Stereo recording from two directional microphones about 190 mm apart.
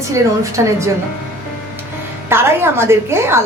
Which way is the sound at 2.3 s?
10° right (ahead or behind).